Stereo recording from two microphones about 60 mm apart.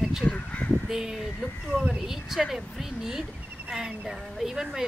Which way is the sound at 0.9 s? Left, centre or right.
Centre.